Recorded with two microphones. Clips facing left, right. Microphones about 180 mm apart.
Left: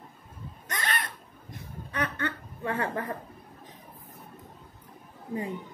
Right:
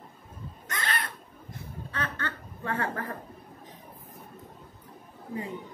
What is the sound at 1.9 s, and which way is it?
Snicker, 15° left (ahead or behind).